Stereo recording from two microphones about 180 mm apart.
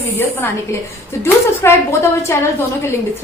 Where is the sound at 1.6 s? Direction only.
15° left (ahead or behind).